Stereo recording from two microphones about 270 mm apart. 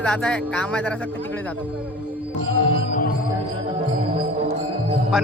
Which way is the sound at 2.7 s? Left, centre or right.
Left.